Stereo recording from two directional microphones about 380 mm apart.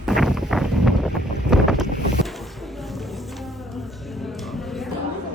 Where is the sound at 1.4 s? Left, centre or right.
Centre.